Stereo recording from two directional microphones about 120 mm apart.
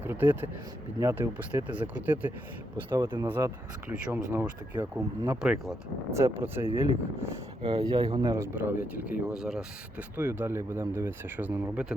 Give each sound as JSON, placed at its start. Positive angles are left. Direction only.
{"t": 0.0, "sound": "speech", "side_deg": -15}
{"t": 5.4, "sound": "speech", "side_deg": -5}
{"t": 6.1, "sound": "speech", "side_deg": -25}
{"t": 7.6, "sound": "speech", "side_deg": -35}
{"t": 8.4, "sound": "speech", "side_deg": -20}
{"t": 9.3, "sound": "speech", "side_deg": -5}
{"t": 10.2, "sound": "speech", "side_deg": -15}